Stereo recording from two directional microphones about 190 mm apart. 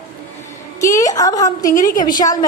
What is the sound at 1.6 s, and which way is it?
Speech, 45° left (ahead or behind).